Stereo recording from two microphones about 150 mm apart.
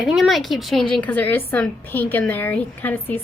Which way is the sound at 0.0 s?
Centre (ahead or behind).